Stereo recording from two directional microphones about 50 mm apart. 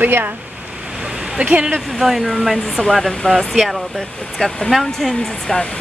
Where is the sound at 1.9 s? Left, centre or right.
Centre.